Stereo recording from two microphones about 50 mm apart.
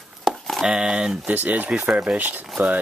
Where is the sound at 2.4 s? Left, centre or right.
Centre.